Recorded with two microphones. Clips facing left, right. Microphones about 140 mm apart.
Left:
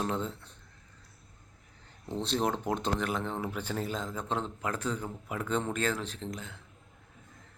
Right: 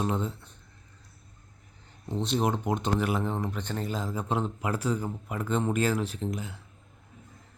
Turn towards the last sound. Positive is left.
turn(degrees=-5)  # may be behind; listen again after turning